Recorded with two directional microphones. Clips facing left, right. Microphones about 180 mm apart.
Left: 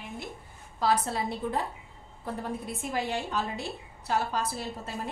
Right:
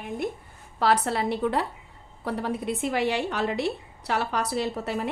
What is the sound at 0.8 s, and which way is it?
A woman's voice, 70° right (ahead or behind).